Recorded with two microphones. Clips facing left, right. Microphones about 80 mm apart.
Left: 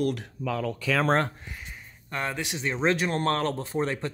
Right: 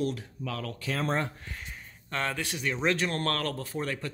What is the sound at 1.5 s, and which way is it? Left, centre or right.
Speech, centre.